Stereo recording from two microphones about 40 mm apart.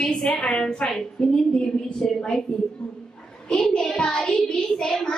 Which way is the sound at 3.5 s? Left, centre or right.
Centre.